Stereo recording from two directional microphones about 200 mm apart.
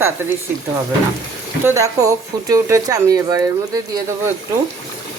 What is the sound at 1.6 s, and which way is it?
Speech, 15° right (ahead or behind).